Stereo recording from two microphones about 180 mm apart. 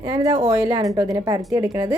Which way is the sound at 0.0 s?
20° right (ahead or behind).